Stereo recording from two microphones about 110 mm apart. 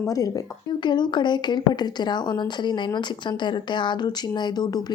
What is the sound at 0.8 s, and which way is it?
A woman's voice, 45° left (ahead or behind).